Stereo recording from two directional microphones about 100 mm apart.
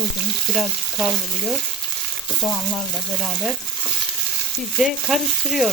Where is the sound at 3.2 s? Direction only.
Centre (ahead or behind).